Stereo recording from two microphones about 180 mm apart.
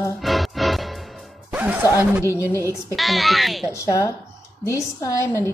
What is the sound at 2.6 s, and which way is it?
Speech, 15° right (ahead or behind).